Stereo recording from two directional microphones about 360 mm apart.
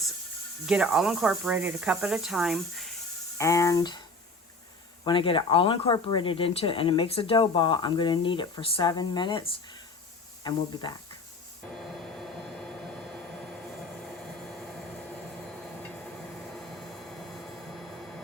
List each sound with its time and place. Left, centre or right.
0.7 s speech: centre
5.0 s speech: centre
12.1 s a sound: centre
16.6 s vehicle: centre